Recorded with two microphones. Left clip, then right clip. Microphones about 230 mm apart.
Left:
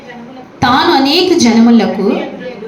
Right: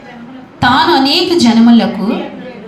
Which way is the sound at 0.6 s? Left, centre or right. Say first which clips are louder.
Even; right.